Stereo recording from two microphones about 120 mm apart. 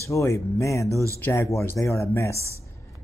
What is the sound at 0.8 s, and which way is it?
Music, 25° right (ahead or behind).